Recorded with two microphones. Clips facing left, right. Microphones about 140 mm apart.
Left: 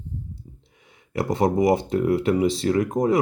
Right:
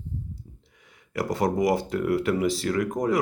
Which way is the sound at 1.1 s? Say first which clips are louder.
Left 4 dB; 25° left (ahead or behind).